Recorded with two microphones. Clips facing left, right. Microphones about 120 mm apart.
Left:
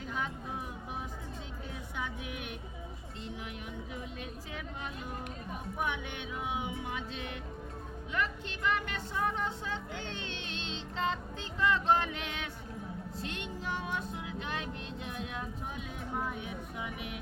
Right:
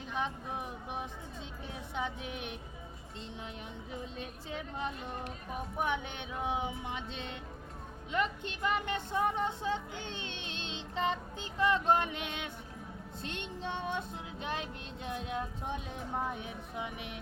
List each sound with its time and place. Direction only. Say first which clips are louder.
0.1 s speech: right 2 dB; 20° right (ahead or behind)
3.9 s speech: even; 30° right (ahead or behind)
6.3 s speech: right 2 dB; 30° right (ahead or behind)
13.2 s child singing: right 1 dB; 25° right (ahead or behind)
16.1 s speech: even; 30° right (ahead or behind)